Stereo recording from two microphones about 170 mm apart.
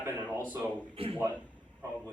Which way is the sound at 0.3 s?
10° left (ahead or behind).